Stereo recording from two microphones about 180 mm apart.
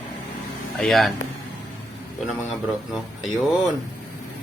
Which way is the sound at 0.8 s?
Centre (ahead or behind).